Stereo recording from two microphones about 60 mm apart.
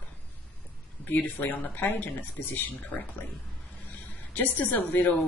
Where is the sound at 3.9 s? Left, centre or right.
Left.